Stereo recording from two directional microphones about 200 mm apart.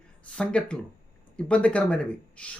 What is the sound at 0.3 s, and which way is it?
Speech, 5° left (ahead or behind).